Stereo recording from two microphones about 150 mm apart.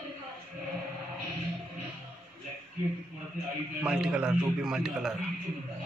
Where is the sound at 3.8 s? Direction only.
5° right (ahead or behind).